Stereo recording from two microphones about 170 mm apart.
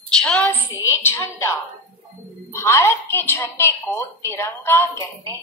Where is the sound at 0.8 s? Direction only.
15° left (ahead or behind).